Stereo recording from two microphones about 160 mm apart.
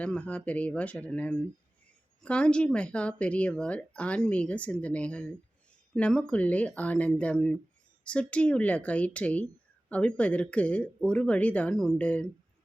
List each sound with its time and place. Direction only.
0.0 s speech: 10° left (ahead or behind)